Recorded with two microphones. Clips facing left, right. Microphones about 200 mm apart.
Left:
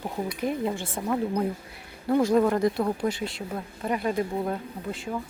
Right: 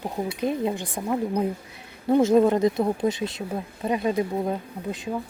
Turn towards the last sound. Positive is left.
turn(degrees=-20)  # may be behind; listen again after turning